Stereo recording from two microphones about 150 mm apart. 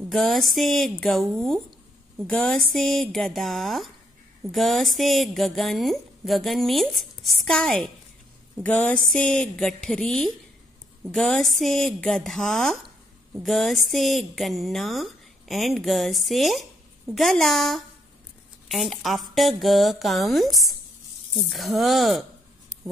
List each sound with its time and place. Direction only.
0.1 s speech: centre (ahead or behind)
8.6 s a sound: 10° left (ahead or behind)
9.1 s speech: 5° left (ahead or behind)